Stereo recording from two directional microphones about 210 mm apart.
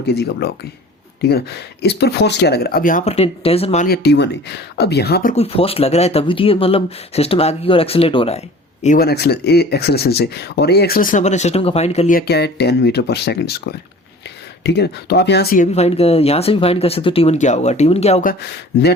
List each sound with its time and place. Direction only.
0.1 s speech: 50° left (ahead or behind); by 3.8 s 30° left (ahead or behind)
3.8 s speech: 50° left (ahead or behind)
5.3 s speech: 30° left (ahead or behind)
8.8 s speech: 40° left (ahead or behind)
12.1 s speech: 50° left (ahead or behind); by 18.3 s 30° left (ahead or behind)
18.3 s speech: 50° left (ahead or behind)